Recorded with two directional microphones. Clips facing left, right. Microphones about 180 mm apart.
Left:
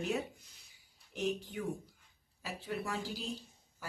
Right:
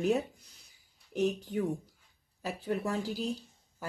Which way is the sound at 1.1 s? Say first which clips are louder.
Right 6 dB; 45° right (ahead or behind).